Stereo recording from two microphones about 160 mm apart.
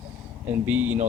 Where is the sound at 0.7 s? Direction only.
10° right (ahead or behind).